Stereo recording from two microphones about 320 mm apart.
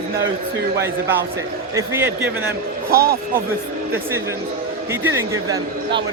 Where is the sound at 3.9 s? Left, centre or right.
Centre.